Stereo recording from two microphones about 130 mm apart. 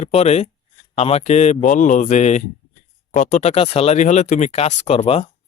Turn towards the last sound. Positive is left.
turn(degrees=55)  # may be behind; listen again after turning